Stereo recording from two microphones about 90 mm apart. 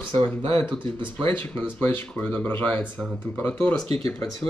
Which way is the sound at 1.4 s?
20° left (ahead or behind).